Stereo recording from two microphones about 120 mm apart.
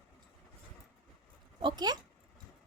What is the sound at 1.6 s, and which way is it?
Speech, 35° right (ahead or behind).